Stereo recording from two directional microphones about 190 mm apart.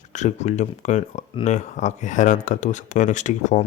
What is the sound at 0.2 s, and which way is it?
Speech, 35° left (ahead or behind).